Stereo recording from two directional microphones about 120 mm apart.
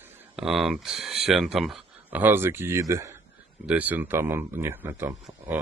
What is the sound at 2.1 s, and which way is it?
Speech, 15° right (ahead or behind).